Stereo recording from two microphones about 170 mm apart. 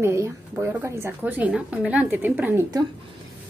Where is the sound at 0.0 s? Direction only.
15° right (ahead or behind).